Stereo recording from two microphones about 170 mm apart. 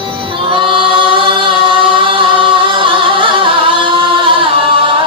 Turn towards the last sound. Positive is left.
turn(degrees=-30)  # may be behind; listen again after turning